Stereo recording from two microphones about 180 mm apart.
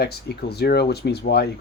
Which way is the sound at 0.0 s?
65° left (ahead or behind).